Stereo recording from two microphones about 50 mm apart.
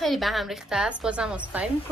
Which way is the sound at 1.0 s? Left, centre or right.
Centre.